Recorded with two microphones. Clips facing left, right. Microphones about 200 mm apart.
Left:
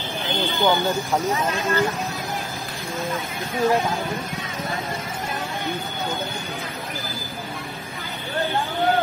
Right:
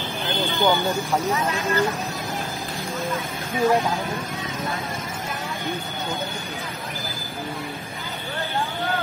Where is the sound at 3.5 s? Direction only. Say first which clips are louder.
Even; centre (ahead or behind).